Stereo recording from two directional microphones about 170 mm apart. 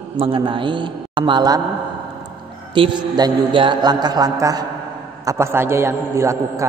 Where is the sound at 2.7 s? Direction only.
25° right (ahead or behind).